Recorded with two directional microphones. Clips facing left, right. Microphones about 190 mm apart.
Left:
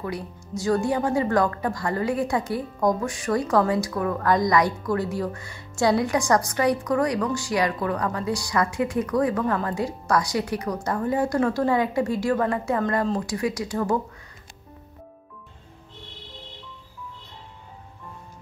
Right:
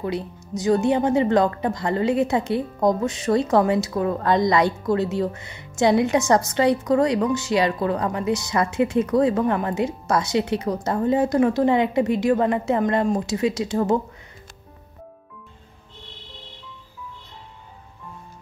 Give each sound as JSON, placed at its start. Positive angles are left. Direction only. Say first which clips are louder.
{"t": 0.0, "sound": "a woman's voice", "louder": "right 4 dB", "side_deg": -20}